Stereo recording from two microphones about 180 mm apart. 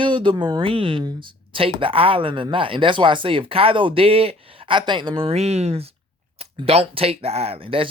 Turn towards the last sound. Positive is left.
turn(degrees=-30)  # may be behind; listen again after turning